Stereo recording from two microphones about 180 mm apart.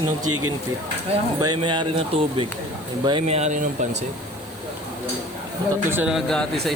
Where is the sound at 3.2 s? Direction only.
40° right (ahead or behind).